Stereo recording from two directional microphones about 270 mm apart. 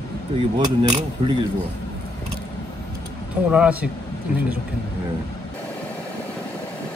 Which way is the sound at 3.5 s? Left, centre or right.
Centre.